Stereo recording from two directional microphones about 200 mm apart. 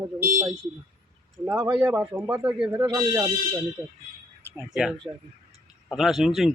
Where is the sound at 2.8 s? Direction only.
20° right (ahead or behind).